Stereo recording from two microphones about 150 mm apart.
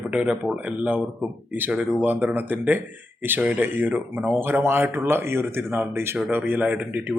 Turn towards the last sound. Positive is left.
turn(degrees=-10)  # may be behind; listen again after turning